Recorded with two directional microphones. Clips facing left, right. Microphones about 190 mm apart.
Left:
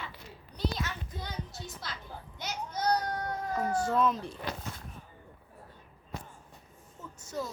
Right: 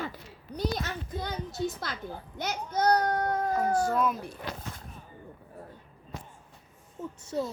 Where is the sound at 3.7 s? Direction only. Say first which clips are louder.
Right 2 dB; 25° left (ahead or behind).